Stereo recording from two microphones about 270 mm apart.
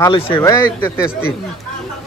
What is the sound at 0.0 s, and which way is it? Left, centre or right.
Speech, centre.